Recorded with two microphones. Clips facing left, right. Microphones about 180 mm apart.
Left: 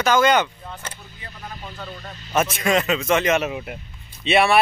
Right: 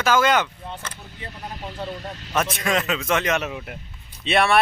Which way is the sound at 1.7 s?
30° right (ahead or behind).